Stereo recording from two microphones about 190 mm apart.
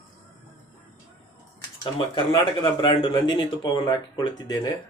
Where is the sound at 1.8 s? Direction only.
25° left (ahead or behind).